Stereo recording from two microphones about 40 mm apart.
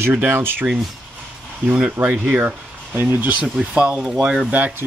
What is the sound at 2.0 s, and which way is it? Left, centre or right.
Speech, right.